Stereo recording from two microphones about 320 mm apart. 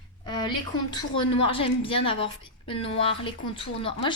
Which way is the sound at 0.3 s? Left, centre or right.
Centre.